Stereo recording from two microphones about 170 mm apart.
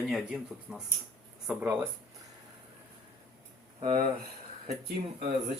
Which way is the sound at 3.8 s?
35° right (ahead or behind).